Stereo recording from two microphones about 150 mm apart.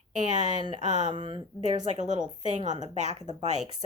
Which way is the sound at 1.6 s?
50° right (ahead or behind).